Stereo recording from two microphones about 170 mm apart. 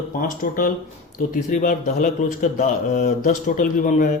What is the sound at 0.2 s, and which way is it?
Speech, 55° left (ahead or behind).